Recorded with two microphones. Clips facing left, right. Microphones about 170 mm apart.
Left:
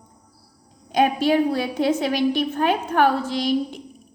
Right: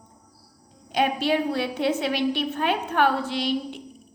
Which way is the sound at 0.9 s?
45° left (ahead or behind).